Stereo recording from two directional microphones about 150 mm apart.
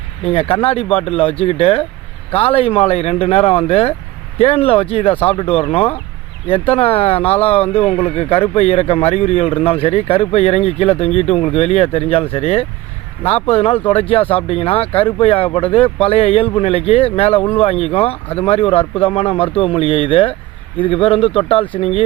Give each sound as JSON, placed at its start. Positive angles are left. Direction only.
{"t": 0.3, "sound": "speech", "side_deg": 40}